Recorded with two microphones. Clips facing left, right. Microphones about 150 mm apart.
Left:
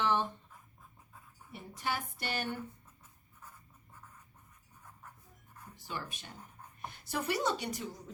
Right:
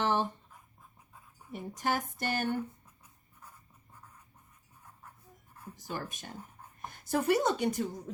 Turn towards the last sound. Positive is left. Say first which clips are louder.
# right 5 dB
turn(degrees=-50)  # may be behind; listen again after turning